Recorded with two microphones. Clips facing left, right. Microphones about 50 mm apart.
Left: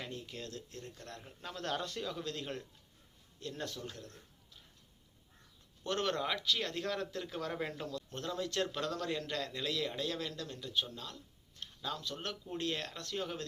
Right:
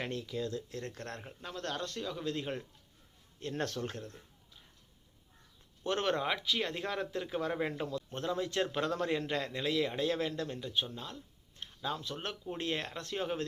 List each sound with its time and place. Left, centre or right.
0.9 s speech: right
1.4 s speech: centre
2.2 s a man's voice: centre
3.4 s speech: right
5.8 s speech: right